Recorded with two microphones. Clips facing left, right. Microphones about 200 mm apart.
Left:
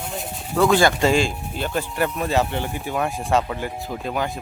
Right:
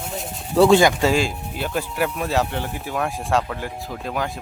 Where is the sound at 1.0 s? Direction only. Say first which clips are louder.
Left 1 dB; 5° right (ahead or behind).